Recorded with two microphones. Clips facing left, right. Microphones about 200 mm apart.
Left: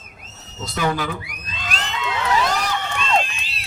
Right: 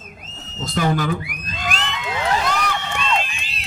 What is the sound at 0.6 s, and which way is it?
Speech, 50° right (ahead or behind).